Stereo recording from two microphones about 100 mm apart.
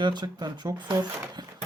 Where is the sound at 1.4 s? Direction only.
45° right (ahead or behind).